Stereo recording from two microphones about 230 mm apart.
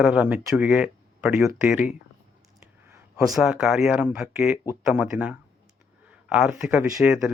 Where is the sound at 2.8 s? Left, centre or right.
Centre.